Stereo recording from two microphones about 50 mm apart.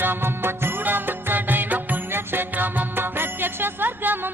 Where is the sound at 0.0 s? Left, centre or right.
Right.